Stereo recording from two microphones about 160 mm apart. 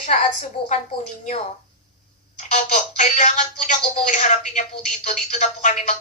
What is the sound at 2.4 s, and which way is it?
Speech, 50° left (ahead or behind).